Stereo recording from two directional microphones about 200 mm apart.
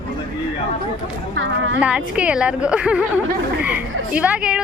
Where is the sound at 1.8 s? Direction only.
5° right (ahead or behind).